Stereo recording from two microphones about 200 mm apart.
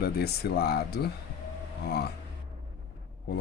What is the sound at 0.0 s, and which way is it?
Speech, 50° left (ahead or behind).